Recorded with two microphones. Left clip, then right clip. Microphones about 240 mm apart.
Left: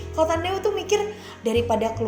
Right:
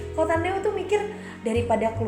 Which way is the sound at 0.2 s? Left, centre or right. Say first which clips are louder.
Left 2 dB; left.